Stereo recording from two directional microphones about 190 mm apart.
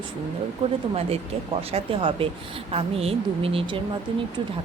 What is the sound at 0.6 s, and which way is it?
Speech, 30° right (ahead or behind).